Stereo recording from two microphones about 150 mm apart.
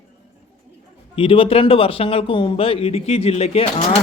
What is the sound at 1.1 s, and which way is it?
Speech, 35° left (ahead or behind).